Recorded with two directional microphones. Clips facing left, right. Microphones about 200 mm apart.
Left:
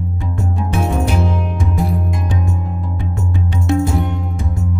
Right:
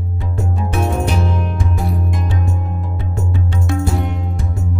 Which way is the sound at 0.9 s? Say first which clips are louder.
Left 1 dB; centre (ahead or behind).